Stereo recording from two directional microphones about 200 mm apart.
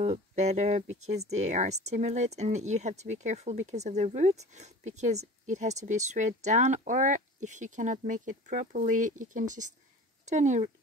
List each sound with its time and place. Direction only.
0.0 s speech: 35° right (ahead or behind)